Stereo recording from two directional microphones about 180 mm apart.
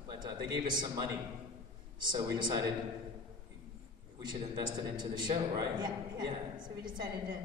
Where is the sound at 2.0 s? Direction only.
25° right (ahead or behind).